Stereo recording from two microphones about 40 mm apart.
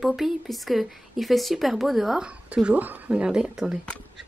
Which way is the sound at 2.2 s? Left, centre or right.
Right.